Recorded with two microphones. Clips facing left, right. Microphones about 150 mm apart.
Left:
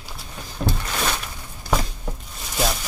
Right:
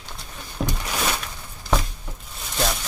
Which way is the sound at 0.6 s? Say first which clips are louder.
Left 2 dB; 5° right (ahead or behind).